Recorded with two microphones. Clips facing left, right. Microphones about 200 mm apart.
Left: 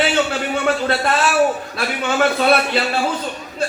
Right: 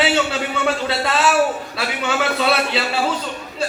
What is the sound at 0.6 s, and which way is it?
A man's voice, 50° left (ahead or behind).